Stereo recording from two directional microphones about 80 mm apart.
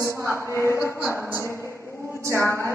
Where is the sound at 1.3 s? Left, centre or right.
Left.